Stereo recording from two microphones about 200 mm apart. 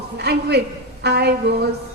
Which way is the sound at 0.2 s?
55° right (ahead or behind).